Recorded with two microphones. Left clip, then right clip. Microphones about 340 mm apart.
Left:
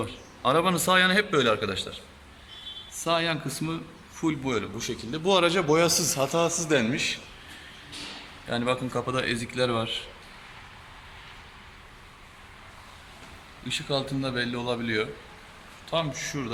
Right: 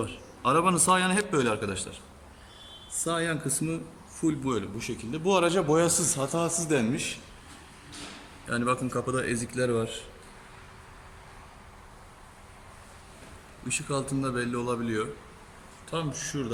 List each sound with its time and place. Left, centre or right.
0.0 s a man's voice: centre
3.0 s a man's voice: centre
8.4 s a man's voice: left
9.0 s a man's voice: centre
13.7 s a man's voice: centre